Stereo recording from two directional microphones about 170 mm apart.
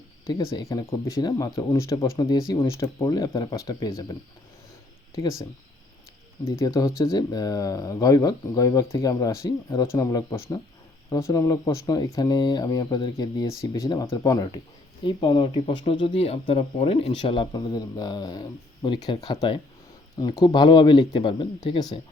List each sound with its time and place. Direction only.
0.3 s speech: 20° left (ahead or behind)
6.6 s speech: 20° left (ahead or behind)